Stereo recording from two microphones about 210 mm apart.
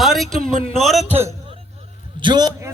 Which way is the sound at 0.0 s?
Centre (ahead or behind).